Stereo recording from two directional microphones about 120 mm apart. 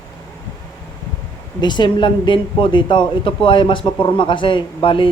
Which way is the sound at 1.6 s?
40° left (ahead or behind).